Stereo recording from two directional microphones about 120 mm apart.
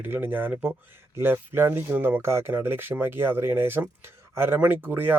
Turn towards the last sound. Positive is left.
turn(degrees=-15)  # may be behind; listen again after turning